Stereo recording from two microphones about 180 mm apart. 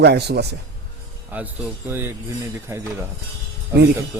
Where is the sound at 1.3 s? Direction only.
10° right (ahead or behind).